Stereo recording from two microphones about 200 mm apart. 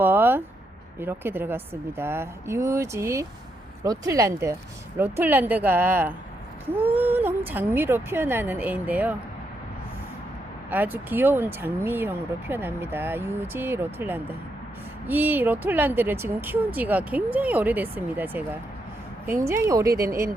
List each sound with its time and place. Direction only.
0.0 s a sound: 10° right (ahead or behind)
0.9 s speech: 10° right (ahead or behind)
10.7 s speech: 10° right (ahead or behind)